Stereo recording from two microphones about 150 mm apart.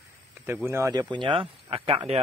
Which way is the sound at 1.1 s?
35° right (ahead or behind).